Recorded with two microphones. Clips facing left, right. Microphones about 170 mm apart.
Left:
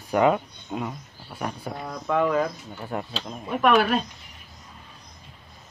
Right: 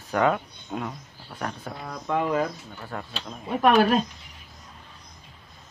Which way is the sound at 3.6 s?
40° right (ahead or behind).